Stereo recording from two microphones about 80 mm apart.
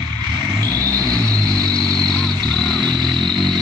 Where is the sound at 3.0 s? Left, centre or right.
Centre.